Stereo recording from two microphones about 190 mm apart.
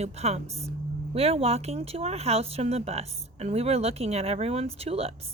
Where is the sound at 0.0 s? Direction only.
35° right (ahead or behind).